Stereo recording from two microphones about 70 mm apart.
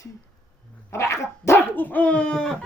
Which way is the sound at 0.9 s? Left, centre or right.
Left.